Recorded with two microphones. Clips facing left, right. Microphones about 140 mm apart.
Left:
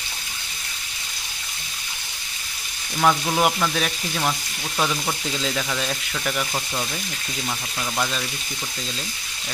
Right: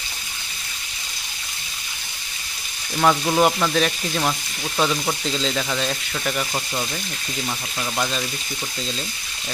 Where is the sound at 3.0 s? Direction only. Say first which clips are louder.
Right 2 dB; 5° right (ahead or behind).